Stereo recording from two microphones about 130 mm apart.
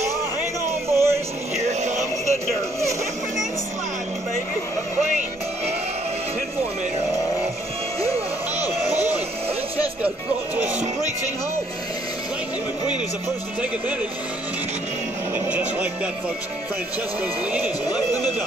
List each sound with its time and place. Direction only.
0.8 s music: 20° right (ahead or behind)
1.6 s a sound: 60° right (ahead or behind)
8.0 s music: 55° right (ahead or behind)
9.8 s music: 10° right (ahead or behind)
15.3 s music: 10° right (ahead or behind)